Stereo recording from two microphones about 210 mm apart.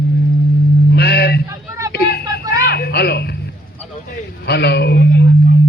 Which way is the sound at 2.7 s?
50° left (ahead or behind).